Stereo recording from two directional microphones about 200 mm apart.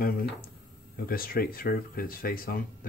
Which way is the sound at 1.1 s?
50° left (ahead or behind).